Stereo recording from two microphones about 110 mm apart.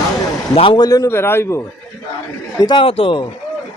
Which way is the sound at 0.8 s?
35° left (ahead or behind).